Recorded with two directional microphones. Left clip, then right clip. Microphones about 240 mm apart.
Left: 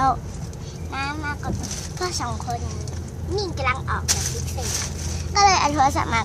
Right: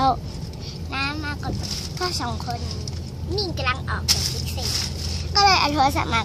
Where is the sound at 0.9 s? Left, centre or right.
Right.